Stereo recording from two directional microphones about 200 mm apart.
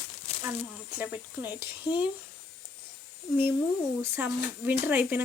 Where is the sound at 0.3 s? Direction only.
30° left (ahead or behind).